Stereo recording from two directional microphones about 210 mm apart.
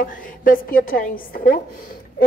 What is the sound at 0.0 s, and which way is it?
A woman's voice, 40° left (ahead or behind).